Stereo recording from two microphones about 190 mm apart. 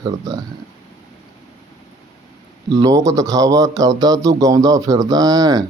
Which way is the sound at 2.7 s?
20° right (ahead or behind).